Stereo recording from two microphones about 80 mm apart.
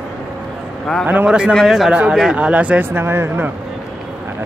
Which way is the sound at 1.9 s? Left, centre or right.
Centre.